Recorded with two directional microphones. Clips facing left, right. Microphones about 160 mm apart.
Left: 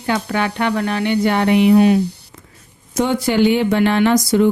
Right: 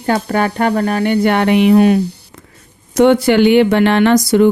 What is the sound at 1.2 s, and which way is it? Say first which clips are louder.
Speech: right 1 dB; 65° right (ahead or behind).